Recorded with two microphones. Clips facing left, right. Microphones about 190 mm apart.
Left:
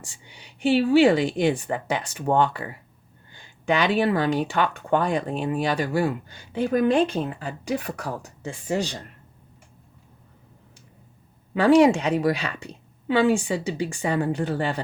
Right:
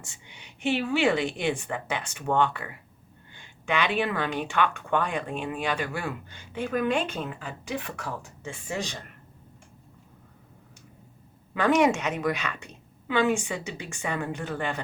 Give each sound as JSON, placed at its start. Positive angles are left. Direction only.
{"t": 0.0, "sound": "speech", "side_deg": 35}
{"t": 11.5, "sound": "speech", "side_deg": 30}